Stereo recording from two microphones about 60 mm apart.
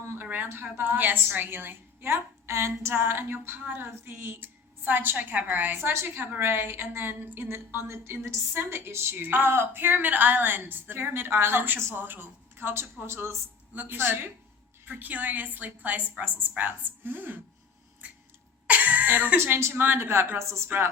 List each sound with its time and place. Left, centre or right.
0.2 s a sound: right
0.6 s a woman's voice: right
18.0 s a sound: right
18.7 s cough: right
19.4 s speech: right
19.7 s a woman's voice: right
20.7 s a woman's voice: right